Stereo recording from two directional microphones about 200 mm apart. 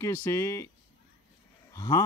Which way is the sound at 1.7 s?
15° left (ahead or behind).